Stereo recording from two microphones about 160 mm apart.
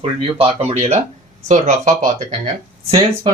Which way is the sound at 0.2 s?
35° right (ahead or behind).